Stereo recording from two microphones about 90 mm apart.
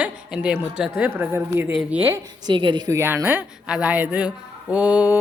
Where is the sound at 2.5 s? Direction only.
60° right (ahead or behind).